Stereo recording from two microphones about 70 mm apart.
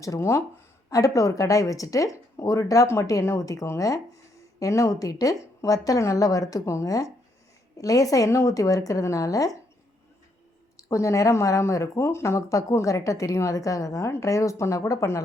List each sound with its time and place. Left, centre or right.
0.2 s speech: left
0.9 s speech: left
10.8 s speech: left